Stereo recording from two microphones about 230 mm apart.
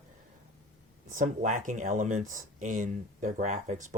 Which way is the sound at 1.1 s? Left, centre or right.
Right.